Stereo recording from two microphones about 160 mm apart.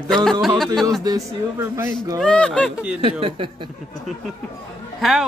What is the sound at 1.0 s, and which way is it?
Speech, 20° right (ahead or behind).